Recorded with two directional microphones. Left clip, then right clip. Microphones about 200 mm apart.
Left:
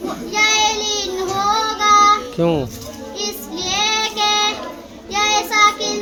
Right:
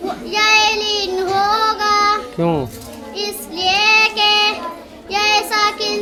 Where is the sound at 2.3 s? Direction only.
10° right (ahead or behind).